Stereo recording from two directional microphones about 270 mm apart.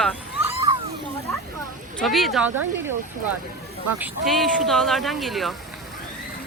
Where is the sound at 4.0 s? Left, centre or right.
Centre.